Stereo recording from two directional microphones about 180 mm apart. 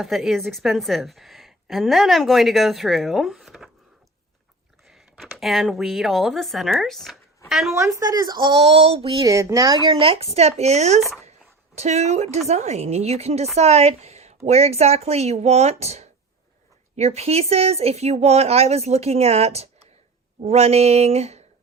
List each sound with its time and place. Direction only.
0.0 s a woman's voice: centre (ahead or behind)
4.9 s speech: 5° right (ahead or behind)
7.8 s a woman's voice: 15° right (ahead or behind)
9.2 s a woman's voice: 15° right (ahead or behind); by 11.0 s 40° right (ahead or behind)
11.3 s a sound: 40° right (ahead or behind)
12.5 s speech: 40° right (ahead or behind)